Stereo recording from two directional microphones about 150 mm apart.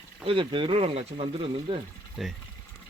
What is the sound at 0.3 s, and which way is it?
Speech, 35° right (ahead or behind).